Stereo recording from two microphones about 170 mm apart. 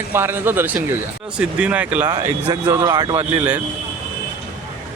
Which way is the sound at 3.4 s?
10° right (ahead or behind).